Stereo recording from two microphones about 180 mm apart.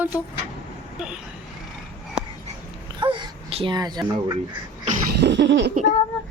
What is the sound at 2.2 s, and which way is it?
Dog, 5° right (ahead or behind).